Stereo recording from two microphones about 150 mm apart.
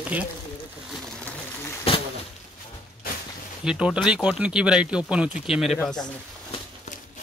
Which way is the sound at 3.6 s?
5° right (ahead or behind).